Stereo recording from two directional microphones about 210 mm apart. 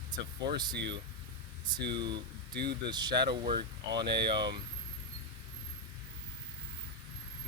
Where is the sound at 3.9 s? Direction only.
55° right (ahead or behind).